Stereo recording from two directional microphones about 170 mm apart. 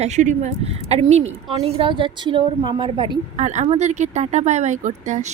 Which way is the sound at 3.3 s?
45° right (ahead or behind).